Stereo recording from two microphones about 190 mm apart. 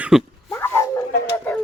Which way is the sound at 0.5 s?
15° left (ahead or behind).